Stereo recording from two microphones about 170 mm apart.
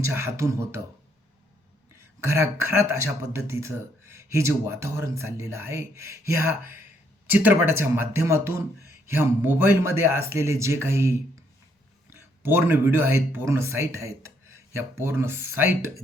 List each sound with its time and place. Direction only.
0.0 s speech: 15° right (ahead or behind)
2.2 s speech: 15° right (ahead or behind)